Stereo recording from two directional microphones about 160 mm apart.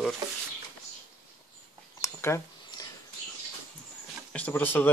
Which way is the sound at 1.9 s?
20° left (ahead or behind).